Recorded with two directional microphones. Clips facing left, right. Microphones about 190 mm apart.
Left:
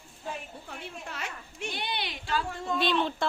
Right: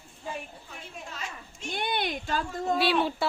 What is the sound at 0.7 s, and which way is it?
A woman's voice, 65° left (ahead or behind).